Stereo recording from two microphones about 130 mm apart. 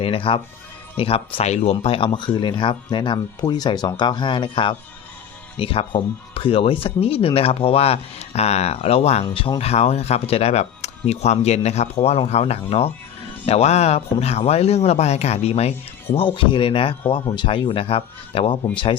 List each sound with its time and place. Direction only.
0.0 s speech: 45° left (ahead or behind)
16.1 s speech: 40° left (ahead or behind)